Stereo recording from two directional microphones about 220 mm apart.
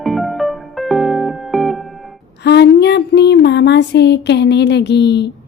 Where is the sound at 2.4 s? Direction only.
50° left (ahead or behind).